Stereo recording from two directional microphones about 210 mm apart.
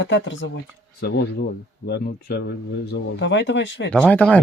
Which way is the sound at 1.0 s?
50° left (ahead or behind).